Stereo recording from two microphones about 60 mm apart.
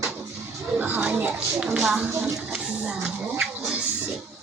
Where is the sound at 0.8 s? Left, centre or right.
Right.